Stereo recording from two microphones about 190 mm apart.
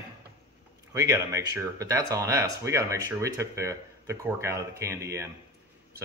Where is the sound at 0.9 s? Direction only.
15° right (ahead or behind).